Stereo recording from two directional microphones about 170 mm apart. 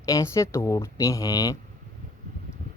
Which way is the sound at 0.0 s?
20° left (ahead or behind).